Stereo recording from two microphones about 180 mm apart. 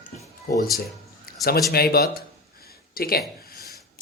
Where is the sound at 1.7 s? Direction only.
60° left (ahead or behind).